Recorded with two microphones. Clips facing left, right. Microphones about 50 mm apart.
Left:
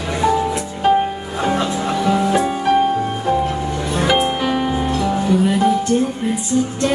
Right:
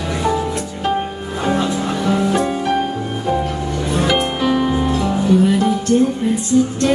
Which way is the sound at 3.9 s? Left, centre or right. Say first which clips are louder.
Even; centre.